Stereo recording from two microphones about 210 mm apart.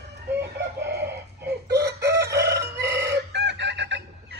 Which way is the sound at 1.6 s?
50° right (ahead or behind).